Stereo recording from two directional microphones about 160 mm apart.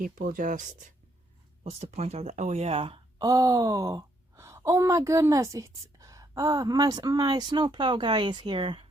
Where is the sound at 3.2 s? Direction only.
20° right (ahead or behind).